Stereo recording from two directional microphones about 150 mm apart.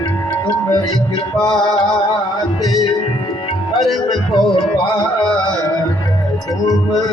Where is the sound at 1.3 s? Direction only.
5° left (ahead or behind).